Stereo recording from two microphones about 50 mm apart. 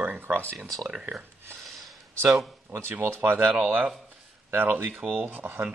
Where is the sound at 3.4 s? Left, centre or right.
Right.